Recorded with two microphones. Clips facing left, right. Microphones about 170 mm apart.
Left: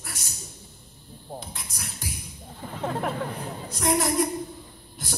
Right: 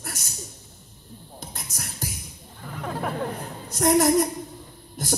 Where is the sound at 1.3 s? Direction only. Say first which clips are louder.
Right 2 dB; 45° right (ahead or behind).